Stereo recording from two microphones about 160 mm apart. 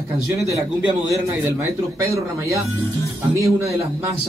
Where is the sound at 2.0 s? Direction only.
20° right (ahead or behind).